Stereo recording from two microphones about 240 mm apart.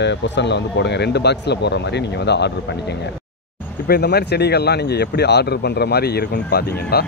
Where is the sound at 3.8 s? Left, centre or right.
Left.